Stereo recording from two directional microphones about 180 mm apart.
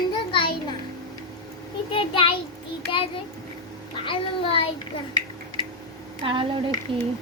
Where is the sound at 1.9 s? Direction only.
30° left (ahead or behind).